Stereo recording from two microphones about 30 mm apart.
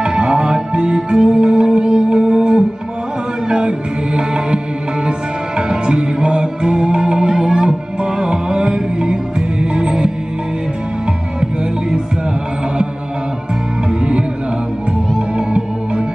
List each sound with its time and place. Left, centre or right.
0.0 s music: right
5.7 s music: right